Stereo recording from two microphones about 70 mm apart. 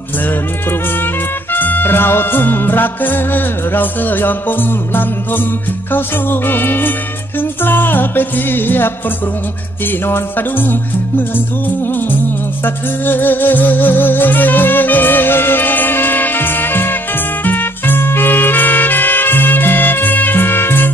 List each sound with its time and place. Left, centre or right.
1.5 s music: left
12.6 s music: left